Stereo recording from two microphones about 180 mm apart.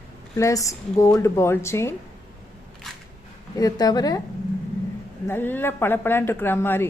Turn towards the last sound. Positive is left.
turn(degrees=15)  # may be behind; listen again after turning